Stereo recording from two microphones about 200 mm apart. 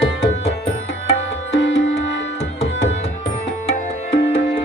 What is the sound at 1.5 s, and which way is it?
Music, 65° left (ahead or behind).